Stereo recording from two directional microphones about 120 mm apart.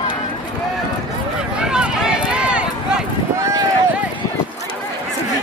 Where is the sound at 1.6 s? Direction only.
5° right (ahead or behind).